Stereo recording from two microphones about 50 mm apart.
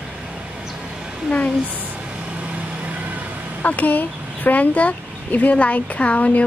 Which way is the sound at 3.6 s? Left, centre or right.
Left.